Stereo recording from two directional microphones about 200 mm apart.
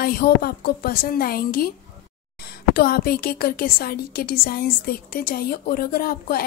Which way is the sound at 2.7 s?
50° left (ahead or behind).